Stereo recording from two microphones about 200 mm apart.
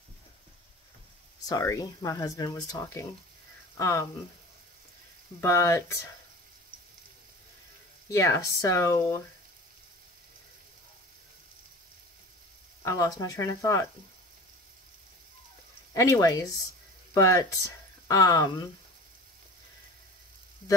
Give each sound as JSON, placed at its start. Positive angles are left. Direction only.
{"t": 1.4, "sound": "speech", "side_deg": 15}
{"t": 5.4, "sound": "speech", "side_deg": 15}
{"t": 8.1, "sound": "speech", "side_deg": 15}
{"t": 12.8, "sound": "speech", "side_deg": 15}
{"t": 15.9, "sound": "speech", "side_deg": 15}